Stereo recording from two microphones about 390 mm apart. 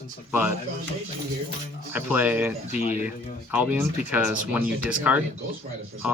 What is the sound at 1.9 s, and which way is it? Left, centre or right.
Speech, centre.